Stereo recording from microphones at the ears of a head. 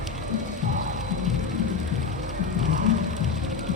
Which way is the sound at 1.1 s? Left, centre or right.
Left.